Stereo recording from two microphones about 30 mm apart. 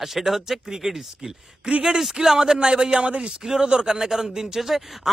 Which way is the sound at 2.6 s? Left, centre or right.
Right.